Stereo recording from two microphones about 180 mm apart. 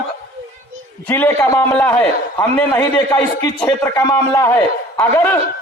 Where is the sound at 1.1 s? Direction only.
15° left (ahead or behind).